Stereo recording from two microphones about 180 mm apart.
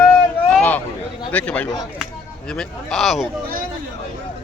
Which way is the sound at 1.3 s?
10° left (ahead or behind).